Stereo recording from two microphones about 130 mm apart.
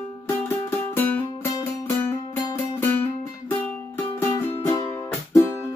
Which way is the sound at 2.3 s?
15° left (ahead or behind).